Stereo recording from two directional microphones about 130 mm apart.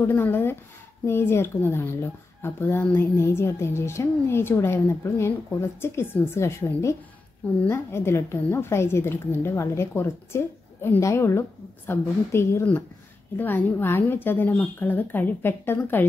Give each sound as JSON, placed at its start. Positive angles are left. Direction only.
{"t": 0.0, "sound": "a woman's voice", "side_deg": 15}